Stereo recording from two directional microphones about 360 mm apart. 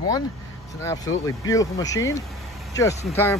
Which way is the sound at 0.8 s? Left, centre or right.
Centre.